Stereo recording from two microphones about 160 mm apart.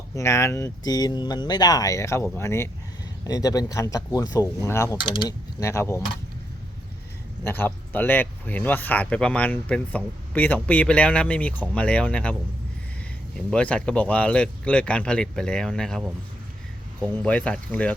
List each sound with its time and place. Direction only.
0.2 s speech: 15° left (ahead or behind)
4.9 s speech: 30° left (ahead or behind)
5.6 s speech: 15° left (ahead or behind)
7.4 s speech: 10° left (ahead or behind)
17.2 s speech: 5° left (ahead or behind)